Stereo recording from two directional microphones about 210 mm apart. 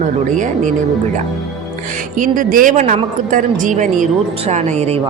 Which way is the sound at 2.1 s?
40° right (ahead or behind).